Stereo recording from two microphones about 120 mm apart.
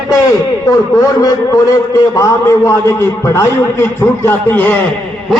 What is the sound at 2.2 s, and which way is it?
A man's voice, 25° left (ahead or behind).